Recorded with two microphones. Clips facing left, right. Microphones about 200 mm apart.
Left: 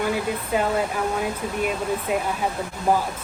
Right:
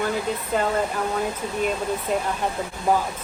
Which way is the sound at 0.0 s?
10° left (ahead or behind).